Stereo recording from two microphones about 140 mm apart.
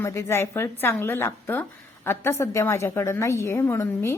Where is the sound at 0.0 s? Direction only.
20° left (ahead or behind).